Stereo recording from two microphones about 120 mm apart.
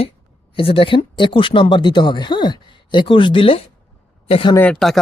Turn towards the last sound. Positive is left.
turn(degrees=0)  # may be behind; listen again after turning